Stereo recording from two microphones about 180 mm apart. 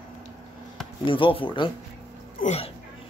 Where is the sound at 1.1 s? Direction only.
30° left (ahead or behind).